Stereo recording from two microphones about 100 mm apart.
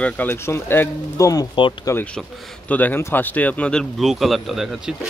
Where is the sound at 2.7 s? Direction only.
15° left (ahead or behind).